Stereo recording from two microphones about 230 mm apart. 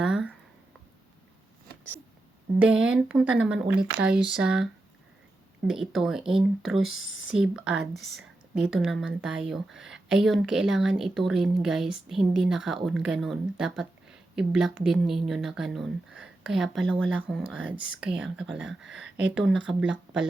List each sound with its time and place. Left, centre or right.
0.0 s a sound: centre
2.6 s speech: centre
6.9 s speech: left
7.3 s speech: centre